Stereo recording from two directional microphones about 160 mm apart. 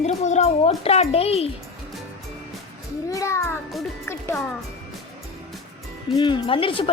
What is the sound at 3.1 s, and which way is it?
A child's voice, 20° left (ahead or behind).